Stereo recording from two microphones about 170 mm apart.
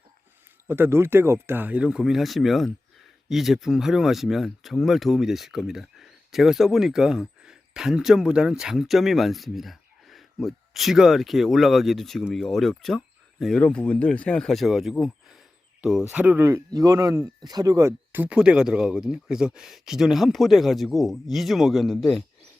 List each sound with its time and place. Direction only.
0.7 s speech: 15° right (ahead or behind); by 22.2 s centre (ahead or behind)